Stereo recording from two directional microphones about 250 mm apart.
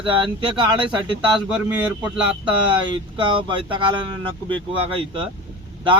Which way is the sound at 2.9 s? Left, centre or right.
Centre.